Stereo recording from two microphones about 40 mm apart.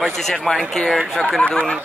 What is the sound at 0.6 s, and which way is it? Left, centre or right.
Speech, left.